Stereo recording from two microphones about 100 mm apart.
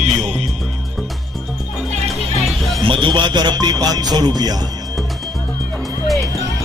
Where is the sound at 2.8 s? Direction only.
60° right (ahead or behind); by 4.5 s 45° right (ahead or behind).